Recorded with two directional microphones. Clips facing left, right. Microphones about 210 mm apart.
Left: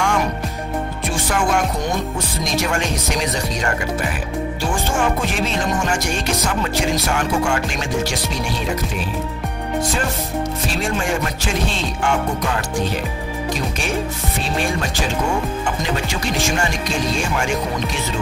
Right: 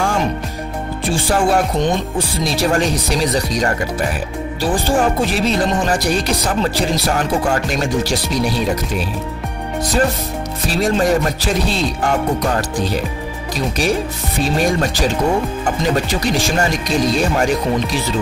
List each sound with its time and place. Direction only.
0.0 s music: 30° right (ahead or behind)
1.0 s speech: 30° right (ahead or behind)
10.7 s speech: 40° right (ahead or behind)
14.4 s speech: 40° right (ahead or behind)
16.4 s speech: 35° right (ahead or behind)